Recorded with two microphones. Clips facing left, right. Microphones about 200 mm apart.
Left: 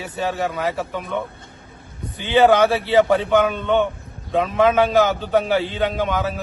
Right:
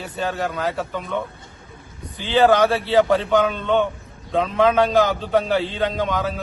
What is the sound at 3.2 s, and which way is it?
A man's voice, 5° left (ahead or behind).